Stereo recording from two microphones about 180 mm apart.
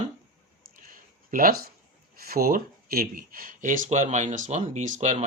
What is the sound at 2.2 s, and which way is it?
Speech, 55° right (ahead or behind).